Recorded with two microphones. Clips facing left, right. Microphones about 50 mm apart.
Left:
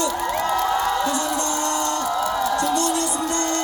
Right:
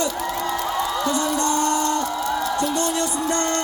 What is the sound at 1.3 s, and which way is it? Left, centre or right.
Music, right.